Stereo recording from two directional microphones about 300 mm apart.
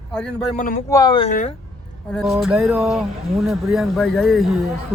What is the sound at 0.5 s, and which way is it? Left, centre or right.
Speech, left.